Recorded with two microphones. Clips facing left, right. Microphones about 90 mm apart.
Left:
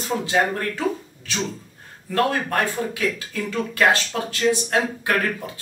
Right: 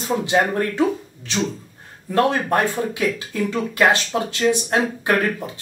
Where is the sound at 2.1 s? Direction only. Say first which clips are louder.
Right 3 dB; 20° right (ahead or behind).